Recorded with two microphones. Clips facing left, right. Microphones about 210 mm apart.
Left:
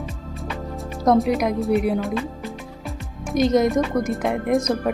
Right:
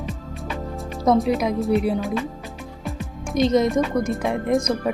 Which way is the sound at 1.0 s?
Centre (ahead or behind).